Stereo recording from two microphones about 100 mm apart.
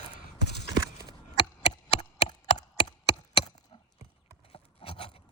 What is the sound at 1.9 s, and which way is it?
Chop, 90° left.